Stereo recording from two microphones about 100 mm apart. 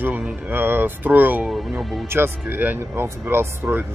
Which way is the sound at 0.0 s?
20° right (ahead or behind).